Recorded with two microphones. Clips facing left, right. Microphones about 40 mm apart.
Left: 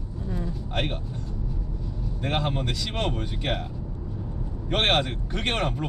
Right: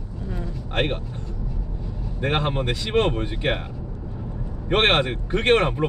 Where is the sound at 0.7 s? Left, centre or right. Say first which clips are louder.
Right 6 dB; right.